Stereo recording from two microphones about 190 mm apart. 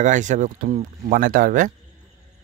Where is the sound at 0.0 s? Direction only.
40° right (ahead or behind).